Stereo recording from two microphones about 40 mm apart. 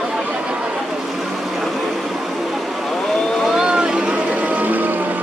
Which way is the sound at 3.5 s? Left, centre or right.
Right.